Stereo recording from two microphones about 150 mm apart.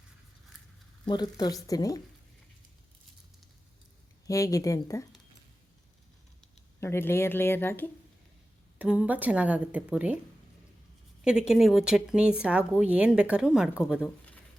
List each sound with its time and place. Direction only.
1.0 s speech: 30° left (ahead or behind)
4.3 s speech: 20° left (ahead or behind)
6.7 s speech: 15° left (ahead or behind)
8.8 s a woman's voice: 10° right (ahead or behind)
11.2 s speech: 5° right (ahead or behind)